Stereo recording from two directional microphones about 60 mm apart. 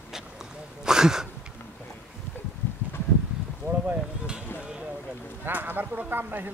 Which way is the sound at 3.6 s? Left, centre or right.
Left.